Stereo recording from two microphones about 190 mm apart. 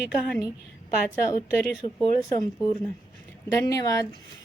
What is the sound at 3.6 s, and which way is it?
Speech, 20° left (ahead or behind).